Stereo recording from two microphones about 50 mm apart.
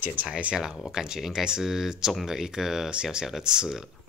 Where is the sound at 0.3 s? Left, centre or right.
Right; by 3.9 s centre.